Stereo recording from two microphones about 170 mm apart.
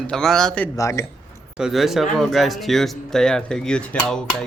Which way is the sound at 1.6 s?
Centre (ahead or behind).